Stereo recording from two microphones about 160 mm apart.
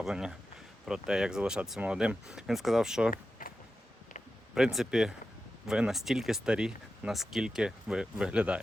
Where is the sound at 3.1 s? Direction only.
55° left (ahead or behind).